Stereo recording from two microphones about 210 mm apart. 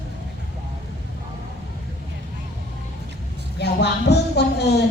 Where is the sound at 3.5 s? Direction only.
50° left (ahead or behind).